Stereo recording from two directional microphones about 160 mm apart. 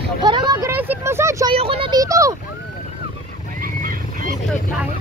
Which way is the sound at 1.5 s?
35° right (ahead or behind).